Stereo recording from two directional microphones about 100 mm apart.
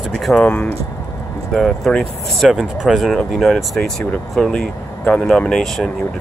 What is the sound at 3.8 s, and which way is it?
Speech, 15° left (ahead or behind).